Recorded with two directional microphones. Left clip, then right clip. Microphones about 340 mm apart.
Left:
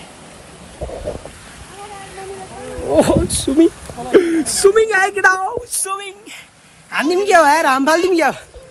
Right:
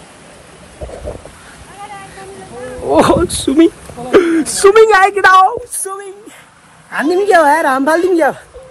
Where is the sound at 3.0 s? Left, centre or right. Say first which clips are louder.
Right 5 dB; centre.